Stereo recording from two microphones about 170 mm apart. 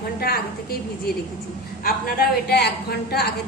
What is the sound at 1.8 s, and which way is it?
A woman's voice, 65° left (ahead or behind).